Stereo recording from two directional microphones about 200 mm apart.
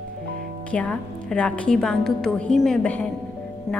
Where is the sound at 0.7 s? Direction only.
5° left (ahead or behind).